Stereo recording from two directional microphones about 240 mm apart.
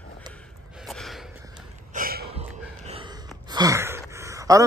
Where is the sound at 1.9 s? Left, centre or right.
Right.